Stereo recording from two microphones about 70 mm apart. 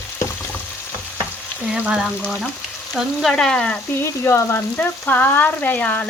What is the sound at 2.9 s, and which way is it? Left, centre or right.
Frying, centre.